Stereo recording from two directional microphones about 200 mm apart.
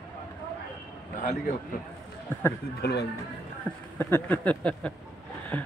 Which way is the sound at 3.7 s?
10° left (ahead or behind).